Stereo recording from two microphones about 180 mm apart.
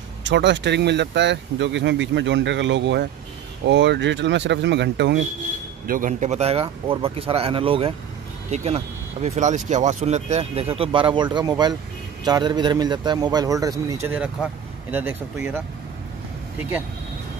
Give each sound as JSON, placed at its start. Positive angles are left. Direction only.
{"t": 0.2, "sound": "speech", "side_deg": -80}
{"t": 5.9, "sound": "a man's voice", "side_deg": -45}